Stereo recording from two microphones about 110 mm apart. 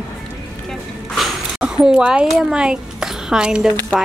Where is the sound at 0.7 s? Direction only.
Centre (ahead or behind).